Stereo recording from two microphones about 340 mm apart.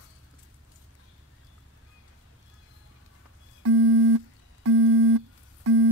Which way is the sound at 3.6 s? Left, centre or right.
Right.